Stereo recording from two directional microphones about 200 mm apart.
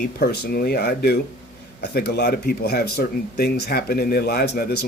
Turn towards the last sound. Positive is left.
turn(degrees=50)  # may be behind; listen again after turning